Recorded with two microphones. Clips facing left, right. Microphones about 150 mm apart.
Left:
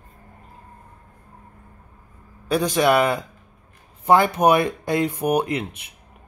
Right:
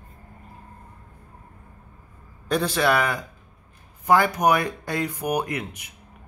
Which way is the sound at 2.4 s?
10° left (ahead or behind).